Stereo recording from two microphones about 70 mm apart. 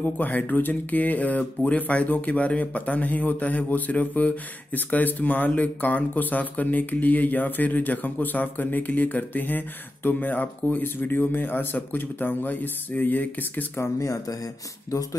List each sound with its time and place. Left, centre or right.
0.0 s speech: left
13.9 s speech: left